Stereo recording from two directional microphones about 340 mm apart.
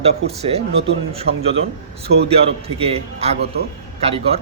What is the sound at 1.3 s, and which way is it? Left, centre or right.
Speech, right.